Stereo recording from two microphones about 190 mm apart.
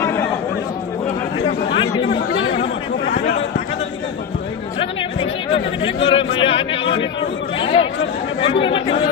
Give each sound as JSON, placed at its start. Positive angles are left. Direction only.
{"t": 0.0, "sound": "chatter", "side_deg": 15}
{"t": 1.7, "sound": "chatter", "side_deg": 25}
{"t": 5.2, "sound": "chatter", "side_deg": 30}
{"t": 8.4, "sound": "speech", "side_deg": 25}